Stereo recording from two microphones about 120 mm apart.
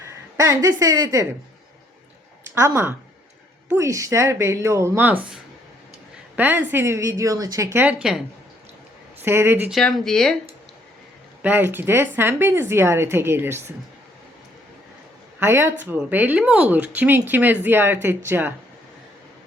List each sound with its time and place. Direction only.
0.3 s speech: 25° right (ahead or behind)
2.6 s speech: 20° right (ahead or behind)
6.3 s speech: 15° right (ahead or behind)
9.2 s speech: 20° right (ahead or behind)
9.6 s speech: centre (ahead or behind)
11.4 s speech: 15° right (ahead or behind)
15.4 s speech: 20° right (ahead or behind)